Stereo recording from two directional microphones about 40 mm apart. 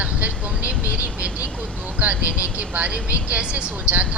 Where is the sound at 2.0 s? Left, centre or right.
Right.